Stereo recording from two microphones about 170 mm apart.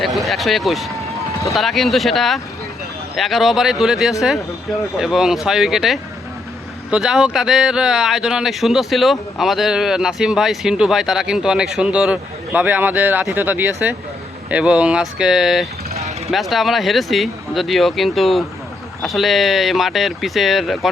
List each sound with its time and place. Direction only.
0.0 s speech: centre (ahead or behind)
16.0 s vehicle: 40° right (ahead or behind)
16.3 s speech: centre (ahead or behind)